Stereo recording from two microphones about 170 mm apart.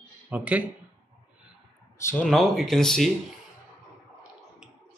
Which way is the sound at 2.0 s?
15° left (ahead or behind).